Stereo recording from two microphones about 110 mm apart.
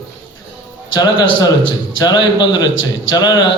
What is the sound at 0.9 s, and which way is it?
A man's voice, 35° left (ahead or behind).